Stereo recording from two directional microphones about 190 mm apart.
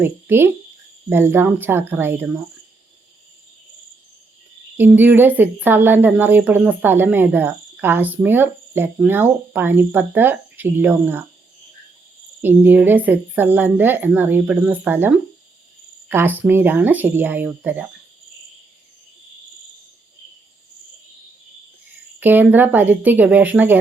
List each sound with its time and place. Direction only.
0.0 s speech: 10° right (ahead or behind)
4.8 s speech: 10° right (ahead or behind)
12.4 s speech: 10° right (ahead or behind)
22.2 s speech: 10° right (ahead or behind)